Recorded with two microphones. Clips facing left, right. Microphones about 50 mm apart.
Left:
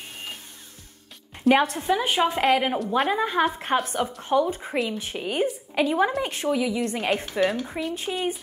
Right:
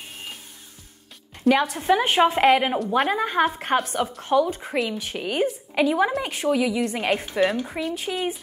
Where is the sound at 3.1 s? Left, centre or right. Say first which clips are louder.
Right 1 dB; centre.